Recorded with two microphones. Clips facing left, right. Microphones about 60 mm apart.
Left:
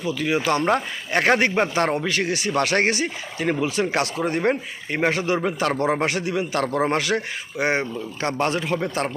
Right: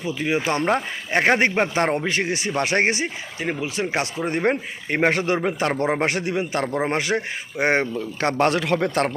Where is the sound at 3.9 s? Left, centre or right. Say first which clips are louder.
Left 1 dB; centre.